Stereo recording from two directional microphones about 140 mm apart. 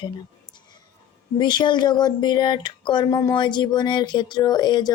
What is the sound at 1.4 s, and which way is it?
Speech, 30° left (ahead or behind).